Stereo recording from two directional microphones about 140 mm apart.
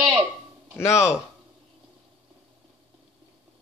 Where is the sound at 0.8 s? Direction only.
20° left (ahead or behind).